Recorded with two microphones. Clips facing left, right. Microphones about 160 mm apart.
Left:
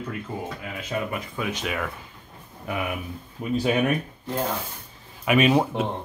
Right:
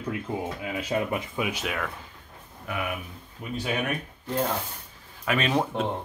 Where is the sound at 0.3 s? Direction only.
20° right (ahead or behind); by 1.9 s centre (ahead or behind).